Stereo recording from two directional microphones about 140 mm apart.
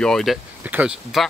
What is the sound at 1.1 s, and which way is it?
Speech, centre (ahead or behind).